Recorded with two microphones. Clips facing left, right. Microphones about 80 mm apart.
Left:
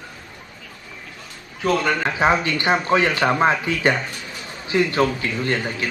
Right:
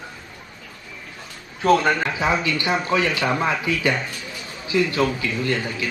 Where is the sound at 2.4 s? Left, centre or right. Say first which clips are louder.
Left 2 dB; left.